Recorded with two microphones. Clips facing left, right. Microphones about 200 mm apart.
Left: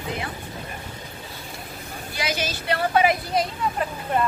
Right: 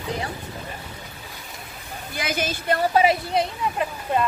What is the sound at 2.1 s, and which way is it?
Speech, 50° right (ahead or behind).